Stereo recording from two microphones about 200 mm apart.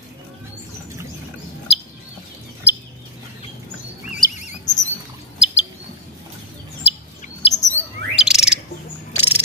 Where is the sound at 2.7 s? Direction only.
10° right (ahead or behind).